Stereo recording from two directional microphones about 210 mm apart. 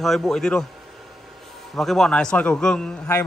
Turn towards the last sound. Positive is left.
turn(degrees=5)  # may be behind; listen again after turning